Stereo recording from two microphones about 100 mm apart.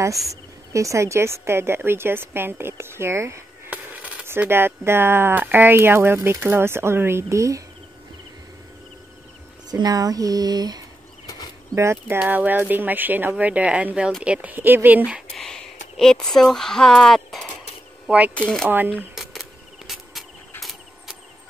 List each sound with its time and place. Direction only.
0.3 s speech: 30° right (ahead or behind)
3.7 s speech: 15° right (ahead or behind); by 7.6 s 30° right (ahead or behind)
9.7 s speech: 40° right (ahead or behind)
11.2 s a sound: 40° left (ahead or behind)
11.7 s speech: 25° right (ahead or behind)
15.3 s speech: 5° left (ahead or behind)
18.0 s speech: 15° right (ahead or behind)
18.3 s speech: 10° left (ahead or behind)